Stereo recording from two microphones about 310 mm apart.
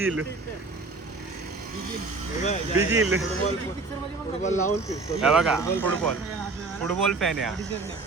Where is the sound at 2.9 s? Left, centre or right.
Centre.